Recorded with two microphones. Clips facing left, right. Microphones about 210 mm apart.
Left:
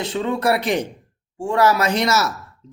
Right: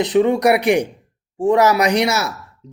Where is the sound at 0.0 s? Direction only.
15° right (ahead or behind).